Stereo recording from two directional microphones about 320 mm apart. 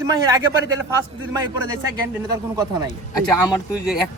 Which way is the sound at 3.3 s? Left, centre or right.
Centre.